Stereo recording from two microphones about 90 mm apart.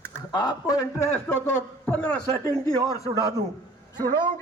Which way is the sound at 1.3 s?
25° left (ahead or behind).